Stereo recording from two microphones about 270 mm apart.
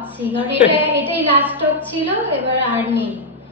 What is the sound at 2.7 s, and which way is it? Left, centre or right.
Speech, centre.